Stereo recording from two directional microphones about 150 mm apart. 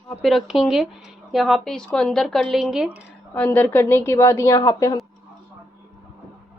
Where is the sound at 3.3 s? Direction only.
10° left (ahead or behind).